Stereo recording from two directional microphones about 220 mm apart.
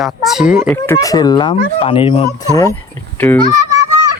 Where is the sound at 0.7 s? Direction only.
10° left (ahead or behind).